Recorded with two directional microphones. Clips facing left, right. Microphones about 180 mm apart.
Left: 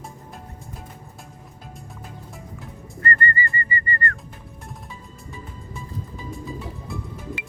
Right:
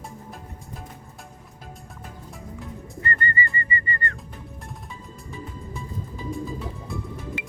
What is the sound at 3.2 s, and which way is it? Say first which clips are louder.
Whistling: left 2 dB; 20° right (ahead or behind).